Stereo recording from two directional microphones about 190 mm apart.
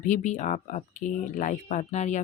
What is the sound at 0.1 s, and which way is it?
Speech, 40° left (ahead or behind).